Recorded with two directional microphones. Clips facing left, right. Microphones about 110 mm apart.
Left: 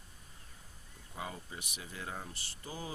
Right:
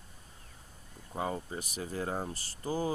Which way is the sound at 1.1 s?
40° right (ahead or behind).